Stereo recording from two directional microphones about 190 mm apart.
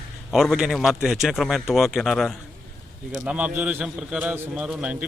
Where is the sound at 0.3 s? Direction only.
Centre (ahead or behind).